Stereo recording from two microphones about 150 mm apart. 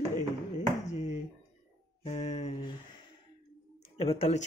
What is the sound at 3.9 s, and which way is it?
Speech, 40° left (ahead or behind).